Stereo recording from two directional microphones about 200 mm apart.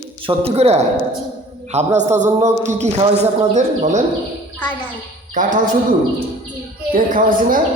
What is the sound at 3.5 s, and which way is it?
Speech, 35° right (ahead or behind).